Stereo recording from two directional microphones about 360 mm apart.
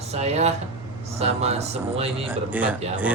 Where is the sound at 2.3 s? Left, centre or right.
Centre.